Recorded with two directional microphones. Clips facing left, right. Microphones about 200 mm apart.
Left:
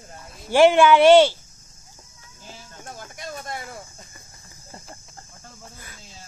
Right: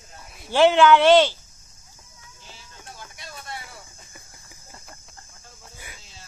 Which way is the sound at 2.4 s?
45° left (ahead or behind).